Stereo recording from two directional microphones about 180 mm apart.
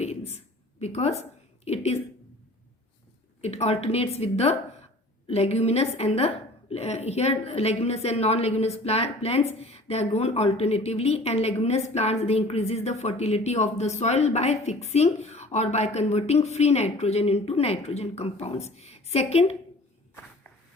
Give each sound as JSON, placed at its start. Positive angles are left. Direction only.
{"t": 0.0, "sound": "a sound", "side_deg": 35}
{"t": 1.6, "sound": "a woman's voice", "side_deg": 35}
{"t": 3.4, "sound": "a woman's voice", "side_deg": 35}